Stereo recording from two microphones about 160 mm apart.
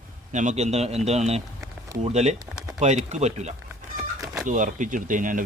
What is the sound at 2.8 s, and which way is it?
Speech, 45° right (ahead or behind).